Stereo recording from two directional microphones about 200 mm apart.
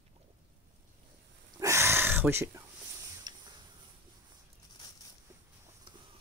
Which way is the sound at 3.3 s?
20° right (ahead or behind).